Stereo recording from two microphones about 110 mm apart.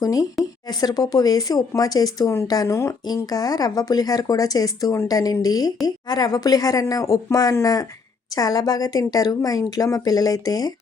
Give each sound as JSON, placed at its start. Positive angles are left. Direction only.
{"t": 0.0, "sound": "speech", "side_deg": 35}